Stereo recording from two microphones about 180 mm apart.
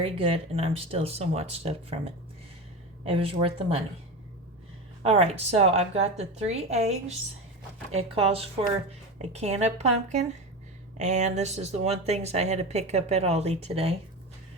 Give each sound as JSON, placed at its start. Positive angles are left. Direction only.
{"t": 0.0, "sound": "speech", "side_deg": -30}
{"t": 3.0, "sound": "speech", "side_deg": -30}
{"t": 5.0, "sound": "speech", "side_deg": -35}